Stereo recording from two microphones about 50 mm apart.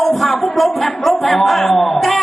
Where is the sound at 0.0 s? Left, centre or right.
Centre.